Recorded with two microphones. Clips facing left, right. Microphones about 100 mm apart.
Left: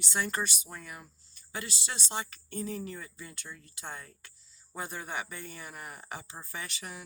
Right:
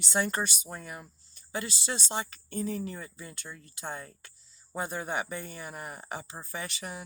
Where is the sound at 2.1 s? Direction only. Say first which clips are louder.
Right 3 dB; 25° right (ahead or behind).